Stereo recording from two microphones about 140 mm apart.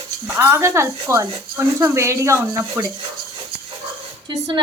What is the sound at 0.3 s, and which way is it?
A woman's voice, 20° right (ahead or behind).